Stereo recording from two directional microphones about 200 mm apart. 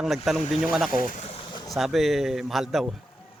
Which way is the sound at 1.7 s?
Centre (ahead or behind).